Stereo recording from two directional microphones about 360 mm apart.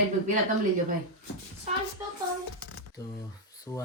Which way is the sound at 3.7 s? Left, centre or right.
Centre.